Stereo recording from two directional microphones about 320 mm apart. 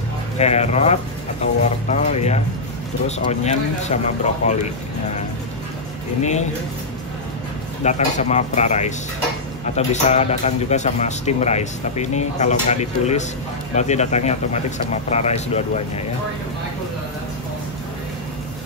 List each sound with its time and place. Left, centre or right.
0.4 s a man's voice: left
6.2 s a man's voice: left
7.8 s a man's voice: left